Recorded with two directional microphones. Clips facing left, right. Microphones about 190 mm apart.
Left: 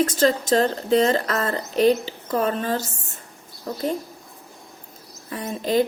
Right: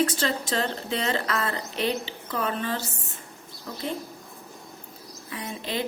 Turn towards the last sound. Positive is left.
turn(degrees=45)  # may be behind; listen again after turning